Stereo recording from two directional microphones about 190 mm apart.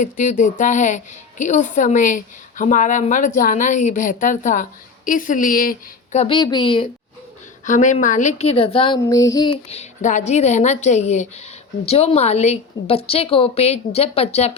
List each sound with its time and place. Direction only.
0.0 s a woman's voice: 40° left (ahead or behind)
7.6 s a woman's voice: 40° left (ahead or behind); by 9.6 s 20° left (ahead or behind)
9.6 s a woman's voice: 35° left (ahead or behind)